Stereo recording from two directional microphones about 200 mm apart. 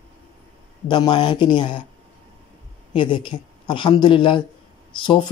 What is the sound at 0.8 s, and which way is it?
Speech, 25° left (ahead or behind).